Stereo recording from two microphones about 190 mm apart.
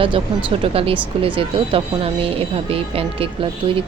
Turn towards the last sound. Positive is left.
turn(degrees=-30)  # may be behind; listen again after turning